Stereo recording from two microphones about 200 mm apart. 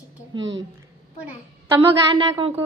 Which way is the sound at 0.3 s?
65° right (ahead or behind).